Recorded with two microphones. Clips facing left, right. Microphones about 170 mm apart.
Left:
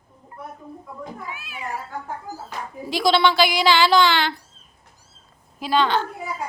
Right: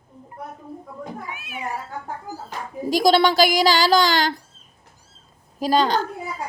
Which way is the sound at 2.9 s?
45° right (ahead or behind).